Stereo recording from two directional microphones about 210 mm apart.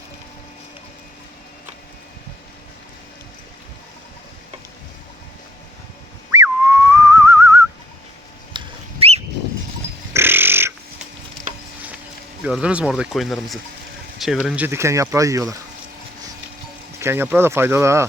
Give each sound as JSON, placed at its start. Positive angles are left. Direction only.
{"t": 6.3, "sound": "whistling", "side_deg": -10}
{"t": 8.5, "sound": "a sound", "side_deg": -30}
{"t": 10.1, "sound": "pig", "side_deg": -10}
{"t": 12.4, "sound": "speech", "side_deg": -5}
{"t": 17.0, "sound": "speech", "side_deg": -10}